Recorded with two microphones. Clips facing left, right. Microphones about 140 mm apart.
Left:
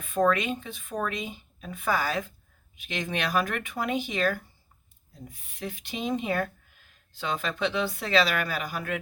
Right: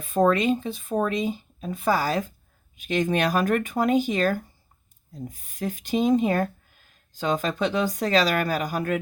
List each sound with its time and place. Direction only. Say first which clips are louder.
0.0 s speech: right 4 dB; 35° right (ahead or behind)